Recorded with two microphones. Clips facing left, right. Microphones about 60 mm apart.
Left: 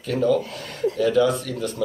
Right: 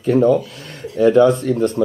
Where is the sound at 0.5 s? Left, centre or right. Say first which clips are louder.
Left 6 dB; left.